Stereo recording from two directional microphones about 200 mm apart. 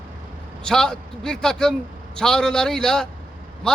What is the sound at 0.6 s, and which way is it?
A man's voice, 5° left (ahead or behind).